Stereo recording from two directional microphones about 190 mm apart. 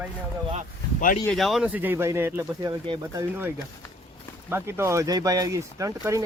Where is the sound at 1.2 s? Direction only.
Centre (ahead or behind).